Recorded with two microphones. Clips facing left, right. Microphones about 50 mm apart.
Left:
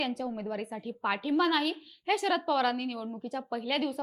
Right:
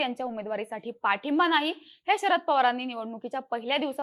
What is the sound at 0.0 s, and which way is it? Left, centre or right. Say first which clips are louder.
A woman's voice: right 3 dB; right.